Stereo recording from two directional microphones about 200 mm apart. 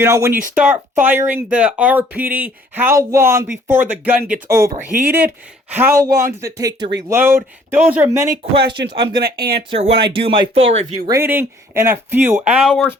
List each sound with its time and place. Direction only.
0.0 s speech: 15° right (ahead or behind)
4.9 s speech: 45° right (ahead or behind)
5.7 s speech: 10° right (ahead or behind)
9.2 s speech: 50° right (ahead or behind)
9.6 s speech: 30° right (ahead or behind)
11.0 s speech: 15° right (ahead or behind)
12.6 s speech: centre (ahead or behind)